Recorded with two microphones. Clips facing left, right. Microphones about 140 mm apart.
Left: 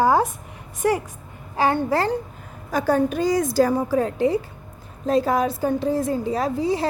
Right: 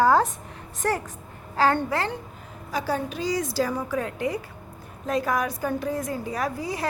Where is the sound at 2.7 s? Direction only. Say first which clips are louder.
Left 7 dB; 50° left (ahead or behind).